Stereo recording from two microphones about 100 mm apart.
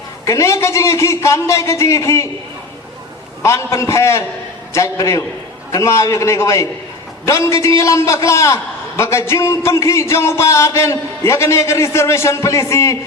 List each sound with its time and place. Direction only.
0.3 s a man's voice: 30° left (ahead or behind)
3.4 s a man's voice: 30° left (ahead or behind)